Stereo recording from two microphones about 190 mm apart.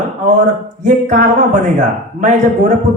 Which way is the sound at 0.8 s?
40° right (ahead or behind).